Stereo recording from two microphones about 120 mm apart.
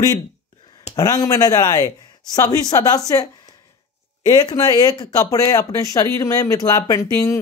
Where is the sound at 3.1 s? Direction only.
30° left (ahead or behind).